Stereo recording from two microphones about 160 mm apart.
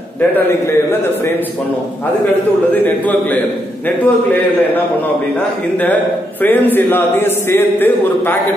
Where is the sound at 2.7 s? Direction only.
10° left (ahead or behind).